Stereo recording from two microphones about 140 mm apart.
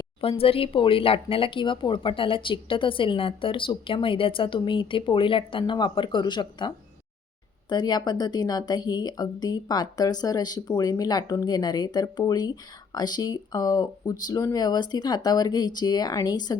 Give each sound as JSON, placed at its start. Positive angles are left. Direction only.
{"t": 0.2, "sound": "a woman's voice", "side_deg": 40}